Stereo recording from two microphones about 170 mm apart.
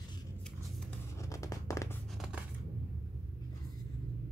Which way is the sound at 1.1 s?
20° left (ahead or behind).